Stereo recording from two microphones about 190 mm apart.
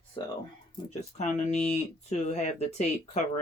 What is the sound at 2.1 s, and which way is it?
Speech, 35° left (ahead or behind).